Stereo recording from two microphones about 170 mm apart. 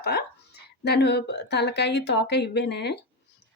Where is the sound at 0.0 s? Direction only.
70° left (ahead or behind).